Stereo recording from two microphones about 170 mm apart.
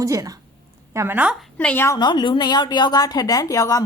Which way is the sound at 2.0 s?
25° left (ahead or behind).